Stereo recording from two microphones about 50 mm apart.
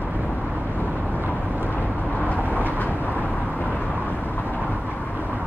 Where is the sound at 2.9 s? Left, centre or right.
Right.